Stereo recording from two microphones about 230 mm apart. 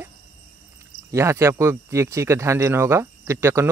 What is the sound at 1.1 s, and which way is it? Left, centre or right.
Speech, centre.